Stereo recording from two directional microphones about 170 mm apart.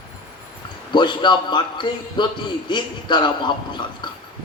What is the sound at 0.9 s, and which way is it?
A man's voice, 25° left (ahead or behind).